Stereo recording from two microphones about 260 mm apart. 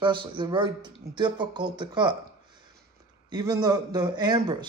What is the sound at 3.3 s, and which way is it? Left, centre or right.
Speech, centre.